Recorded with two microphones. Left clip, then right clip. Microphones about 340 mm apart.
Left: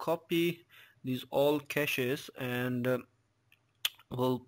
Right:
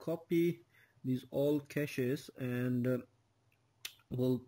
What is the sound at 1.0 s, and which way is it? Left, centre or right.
Speech, left.